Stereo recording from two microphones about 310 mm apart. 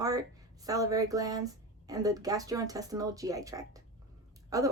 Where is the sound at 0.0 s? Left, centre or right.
Centre.